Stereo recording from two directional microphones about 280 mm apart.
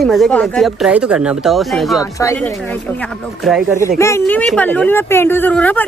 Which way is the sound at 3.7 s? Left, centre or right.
Centre.